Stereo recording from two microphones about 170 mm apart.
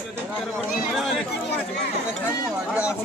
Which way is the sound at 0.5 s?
Centre (ahead or behind).